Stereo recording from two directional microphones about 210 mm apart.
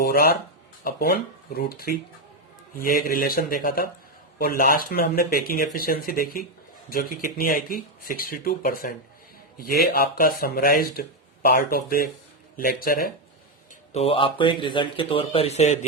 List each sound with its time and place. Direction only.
0.0 s a sound: 45° left (ahead or behind)
0.9 s speech: 45° left (ahead or behind)
13.9 s speech: 30° left (ahead or behind)